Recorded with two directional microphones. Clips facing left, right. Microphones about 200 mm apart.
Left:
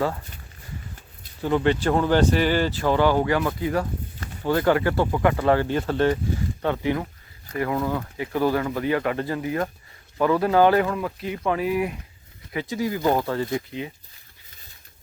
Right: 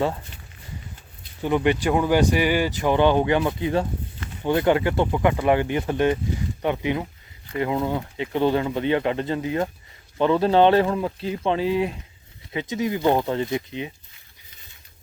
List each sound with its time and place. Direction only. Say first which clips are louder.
1.4 s speech: even; 15° right (ahead or behind)